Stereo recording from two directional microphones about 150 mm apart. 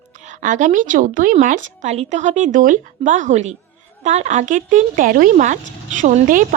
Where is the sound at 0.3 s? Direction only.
55° right (ahead or behind).